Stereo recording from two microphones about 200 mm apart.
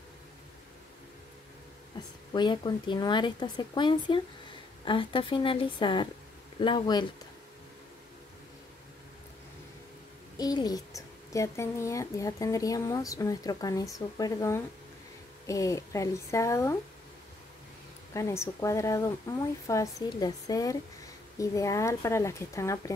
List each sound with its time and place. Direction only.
2.3 s speech: 20° left (ahead or behind)
10.3 s a child's voice: 20° left (ahead or behind)
18.1 s a child's voice: 15° left (ahead or behind)